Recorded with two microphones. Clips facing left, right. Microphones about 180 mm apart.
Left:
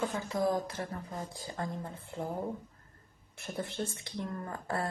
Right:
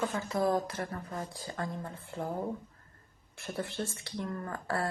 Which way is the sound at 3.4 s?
20° left (ahead or behind).